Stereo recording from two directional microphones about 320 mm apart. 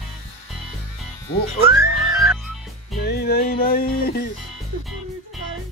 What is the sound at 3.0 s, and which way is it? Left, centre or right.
Music, left.